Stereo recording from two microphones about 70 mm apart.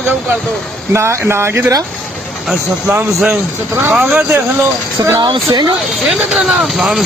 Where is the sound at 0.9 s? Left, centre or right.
Right.